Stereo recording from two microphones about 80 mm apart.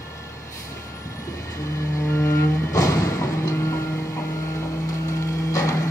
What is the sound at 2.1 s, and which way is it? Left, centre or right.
Music, left.